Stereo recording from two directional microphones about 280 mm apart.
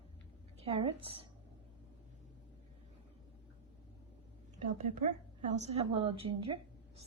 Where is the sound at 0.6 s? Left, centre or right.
Centre.